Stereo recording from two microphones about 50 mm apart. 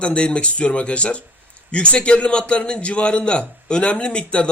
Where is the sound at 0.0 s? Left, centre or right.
Left.